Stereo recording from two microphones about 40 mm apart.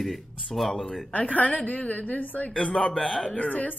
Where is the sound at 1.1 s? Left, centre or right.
Left.